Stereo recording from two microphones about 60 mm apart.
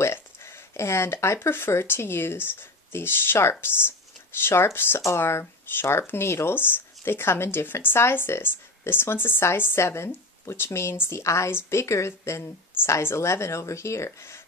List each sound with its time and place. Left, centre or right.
0.0 s speech: left